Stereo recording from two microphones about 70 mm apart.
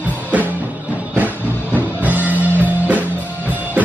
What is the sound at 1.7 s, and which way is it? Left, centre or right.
Music, right.